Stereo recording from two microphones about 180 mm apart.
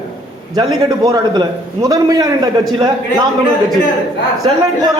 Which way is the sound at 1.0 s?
20° right (ahead or behind).